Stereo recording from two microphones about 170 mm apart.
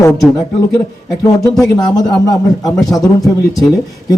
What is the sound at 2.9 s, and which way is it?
Speech, 20° left (ahead or behind).